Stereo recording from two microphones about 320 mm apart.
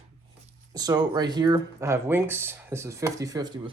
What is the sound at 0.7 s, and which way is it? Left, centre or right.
Speech, centre.